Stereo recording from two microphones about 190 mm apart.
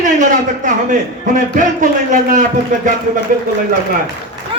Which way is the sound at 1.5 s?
45° right (ahead or behind).